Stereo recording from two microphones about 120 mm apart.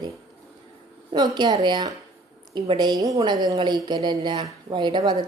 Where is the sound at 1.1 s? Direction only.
35° right (ahead or behind).